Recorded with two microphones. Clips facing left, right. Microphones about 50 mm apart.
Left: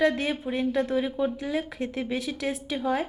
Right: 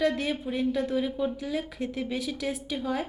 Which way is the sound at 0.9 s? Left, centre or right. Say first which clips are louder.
Left 2 dB; left.